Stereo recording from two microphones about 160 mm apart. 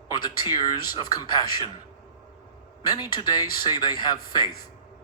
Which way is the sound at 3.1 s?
25° left (ahead or behind).